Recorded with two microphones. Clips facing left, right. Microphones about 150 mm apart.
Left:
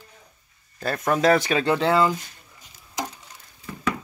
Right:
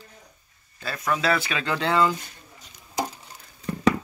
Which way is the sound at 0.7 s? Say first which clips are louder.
Left 4 dB; 45° left (ahead or behind).